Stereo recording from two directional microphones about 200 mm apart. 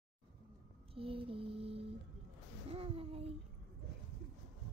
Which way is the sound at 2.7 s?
30° right (ahead or behind).